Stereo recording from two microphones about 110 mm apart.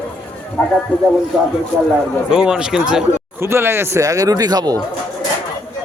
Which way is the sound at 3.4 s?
20° right (ahead or behind).